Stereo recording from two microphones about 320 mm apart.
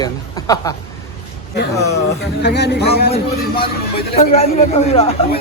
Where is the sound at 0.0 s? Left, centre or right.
Centre.